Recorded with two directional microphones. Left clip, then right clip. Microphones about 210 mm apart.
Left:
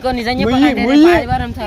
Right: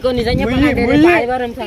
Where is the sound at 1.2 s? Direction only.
55° left (ahead or behind).